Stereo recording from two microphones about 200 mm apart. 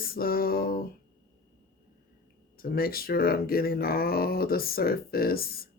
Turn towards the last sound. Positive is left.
turn(degrees=50)  # may be behind; listen again after turning